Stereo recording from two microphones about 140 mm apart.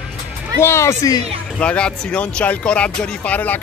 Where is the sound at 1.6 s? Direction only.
10° left (ahead or behind).